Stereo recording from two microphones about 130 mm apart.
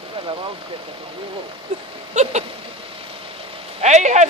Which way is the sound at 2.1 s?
60° right (ahead or behind).